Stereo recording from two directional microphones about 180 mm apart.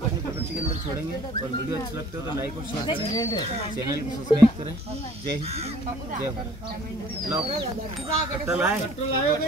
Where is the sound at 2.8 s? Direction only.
20° left (ahead or behind).